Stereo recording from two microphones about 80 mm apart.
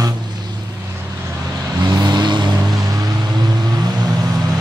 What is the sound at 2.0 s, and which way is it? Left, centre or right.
Vehicle, right.